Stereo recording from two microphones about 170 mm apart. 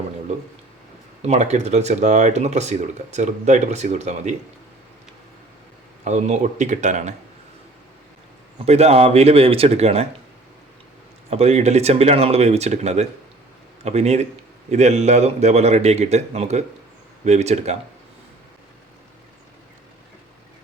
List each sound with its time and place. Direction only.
1.2 s speech: 40° right (ahead or behind)
6.1 s speech: 45° right (ahead or behind)
8.6 s speech: 40° right (ahead or behind)
11.3 s speech: 40° right (ahead or behind)